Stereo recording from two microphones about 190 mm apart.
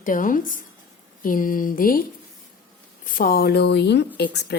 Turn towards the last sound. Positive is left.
turn(degrees=60)  # may be behind; listen again after turning